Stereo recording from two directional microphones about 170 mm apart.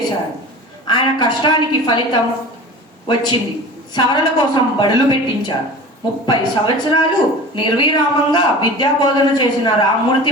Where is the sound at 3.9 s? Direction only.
25° left (ahead or behind).